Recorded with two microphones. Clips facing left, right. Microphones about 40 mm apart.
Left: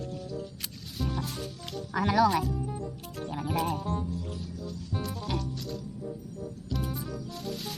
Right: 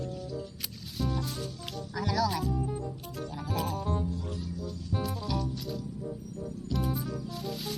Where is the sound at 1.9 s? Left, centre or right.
Left.